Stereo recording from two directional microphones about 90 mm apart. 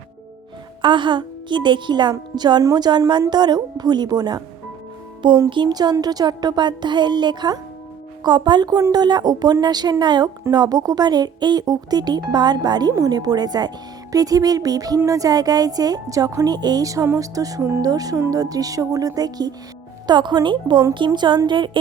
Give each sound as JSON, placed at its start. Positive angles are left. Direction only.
{"t": 0.8, "sound": "a woman's voice", "side_deg": -60}
{"t": 5.5, "sound": "a woman's voice", "side_deg": -55}
{"t": 17.6, "sound": "speech", "side_deg": -30}
{"t": 17.8, "sound": "a woman's voice", "side_deg": -45}